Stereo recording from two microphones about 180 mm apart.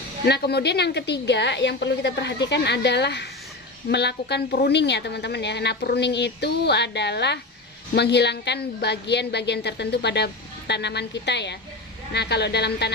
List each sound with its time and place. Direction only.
0.3 s a woman's voice: 65° left (ahead or behind)